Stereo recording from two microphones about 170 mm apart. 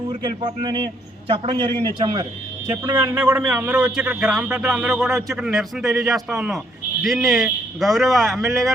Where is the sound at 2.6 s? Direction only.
15° right (ahead or behind).